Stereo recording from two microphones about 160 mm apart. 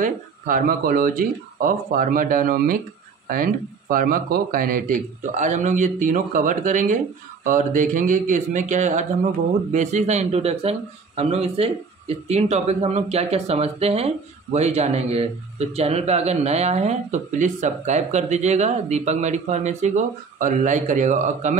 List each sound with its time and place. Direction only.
0.0 s speech: 55° right (ahead or behind)